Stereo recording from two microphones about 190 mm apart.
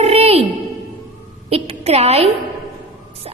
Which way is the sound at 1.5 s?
30° right (ahead or behind).